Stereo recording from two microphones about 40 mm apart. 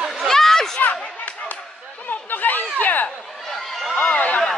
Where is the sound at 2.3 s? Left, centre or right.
Left.